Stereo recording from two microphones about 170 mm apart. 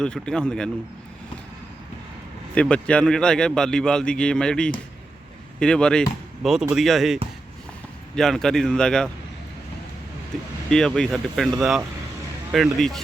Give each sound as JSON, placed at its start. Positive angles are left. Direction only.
{"t": 0.0, "sound": "a man's voice", "side_deg": 5}
{"t": 2.6, "sound": "a man's voice", "side_deg": 5}
{"t": 10.7, "sound": "a man's voice", "side_deg": 5}
{"t": 12.5, "sound": "a man's voice", "side_deg": 0}